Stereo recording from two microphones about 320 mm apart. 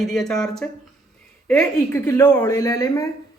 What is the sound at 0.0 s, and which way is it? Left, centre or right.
A woman's voice, centre.